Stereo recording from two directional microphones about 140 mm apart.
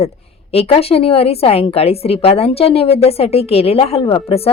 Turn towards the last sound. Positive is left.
turn(degrees=45)  # may be behind; listen again after turning